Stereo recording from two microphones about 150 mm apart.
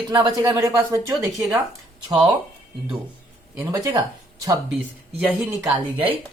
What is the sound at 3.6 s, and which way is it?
Speech, 20° right (ahead or behind).